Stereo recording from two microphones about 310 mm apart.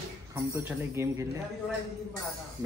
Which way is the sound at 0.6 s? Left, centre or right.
Centre.